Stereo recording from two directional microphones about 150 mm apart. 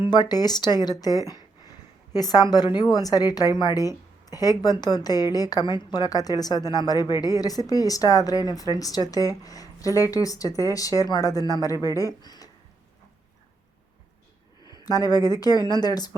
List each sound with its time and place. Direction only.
0.0 s a woman's voice: 30° left (ahead or behind)
14.6 s speech: 25° left (ahead or behind)